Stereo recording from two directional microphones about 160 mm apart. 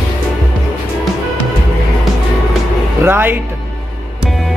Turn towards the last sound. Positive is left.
turn(degrees=-15)  # may be behind; listen again after turning